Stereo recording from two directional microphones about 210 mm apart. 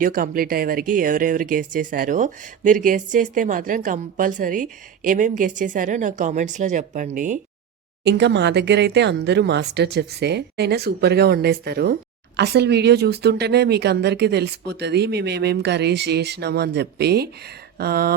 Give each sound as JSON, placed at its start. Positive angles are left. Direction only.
{"t": 0.0, "sound": "speech", "side_deg": -40}
{"t": 8.0, "sound": "speech", "side_deg": -55}